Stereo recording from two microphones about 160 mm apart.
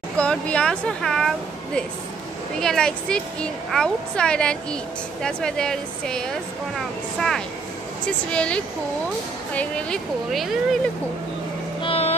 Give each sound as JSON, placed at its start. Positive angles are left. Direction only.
{"t": 0.2, "sound": "a woman's voice", "side_deg": 5}
{"t": 2.6, "sound": "a woman's voice", "side_deg": 5}
{"t": 11.8, "sound": "boat", "side_deg": 40}